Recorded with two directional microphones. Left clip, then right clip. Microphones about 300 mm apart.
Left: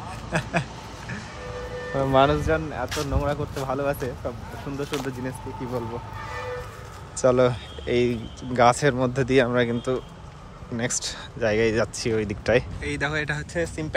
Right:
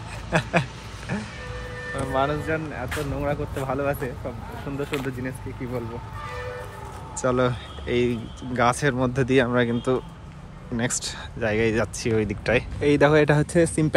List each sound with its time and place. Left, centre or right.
0.3 s speech: centre
2.0 s speech: left
2.4 s speech: centre
7.2 s speech: centre